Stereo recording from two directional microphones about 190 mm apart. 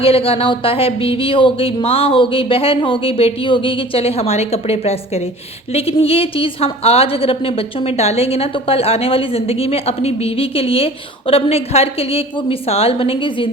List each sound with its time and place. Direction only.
0.0 s a woman's voice: 30° left (ahead or behind)